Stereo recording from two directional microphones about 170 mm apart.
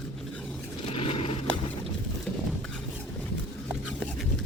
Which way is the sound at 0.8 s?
35° left (ahead or behind).